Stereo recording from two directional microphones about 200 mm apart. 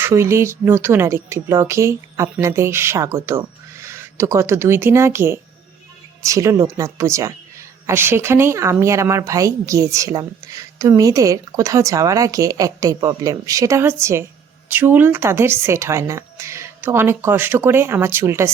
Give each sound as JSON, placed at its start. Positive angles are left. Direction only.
{"t": 0.0, "sound": "speech", "side_deg": -15}